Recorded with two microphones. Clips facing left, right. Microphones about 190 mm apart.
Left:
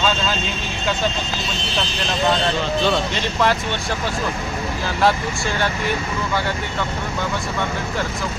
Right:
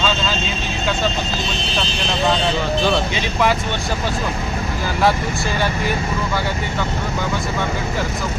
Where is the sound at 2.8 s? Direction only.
10° right (ahead or behind).